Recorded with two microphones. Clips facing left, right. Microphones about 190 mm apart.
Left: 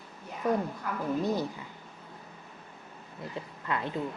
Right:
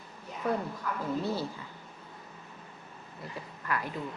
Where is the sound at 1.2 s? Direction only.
15° left (ahead or behind).